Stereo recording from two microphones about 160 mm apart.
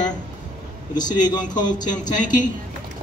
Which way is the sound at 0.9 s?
25° left (ahead or behind).